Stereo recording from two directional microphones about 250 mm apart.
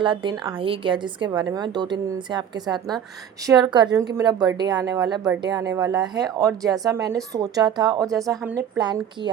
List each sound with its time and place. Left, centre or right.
0.0 s a woman's voice: centre